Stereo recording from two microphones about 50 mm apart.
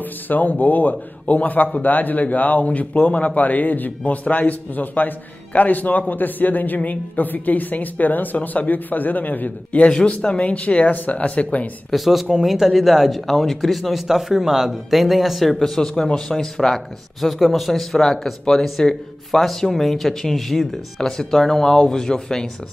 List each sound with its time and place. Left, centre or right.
0.0 s speech: left
9.8 s speech: centre
11.9 s speech: centre